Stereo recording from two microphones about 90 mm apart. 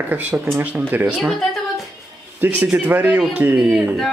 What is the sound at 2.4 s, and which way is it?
Speech, 20° right (ahead or behind).